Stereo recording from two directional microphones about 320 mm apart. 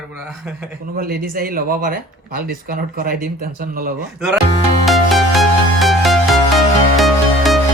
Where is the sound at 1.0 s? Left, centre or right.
Right.